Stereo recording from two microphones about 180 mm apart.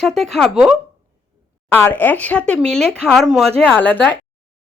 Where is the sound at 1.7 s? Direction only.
10° left (ahead or behind).